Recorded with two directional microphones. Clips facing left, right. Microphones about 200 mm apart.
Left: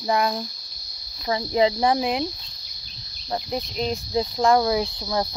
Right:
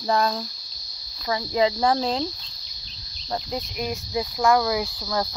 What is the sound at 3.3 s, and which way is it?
Speech, 25° left (ahead or behind).